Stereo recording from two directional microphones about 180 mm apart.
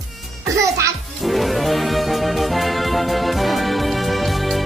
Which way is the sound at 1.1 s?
Centre (ahead or behind).